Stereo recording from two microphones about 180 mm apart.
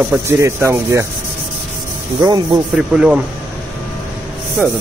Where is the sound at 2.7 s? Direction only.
5° right (ahead or behind).